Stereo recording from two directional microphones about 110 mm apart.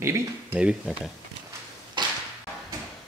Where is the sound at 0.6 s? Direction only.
10° right (ahead or behind).